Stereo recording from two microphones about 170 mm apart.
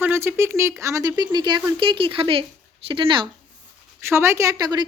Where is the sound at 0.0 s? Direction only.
15° right (ahead or behind); by 3.2 s 30° right (ahead or behind).